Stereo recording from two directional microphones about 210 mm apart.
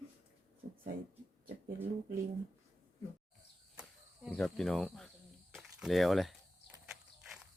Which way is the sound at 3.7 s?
5° right (ahead or behind).